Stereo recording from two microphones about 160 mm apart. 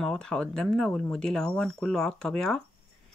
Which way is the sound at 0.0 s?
5° left (ahead or behind).